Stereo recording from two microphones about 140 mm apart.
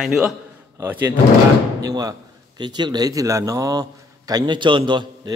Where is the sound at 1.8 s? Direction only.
25° right (ahead or behind).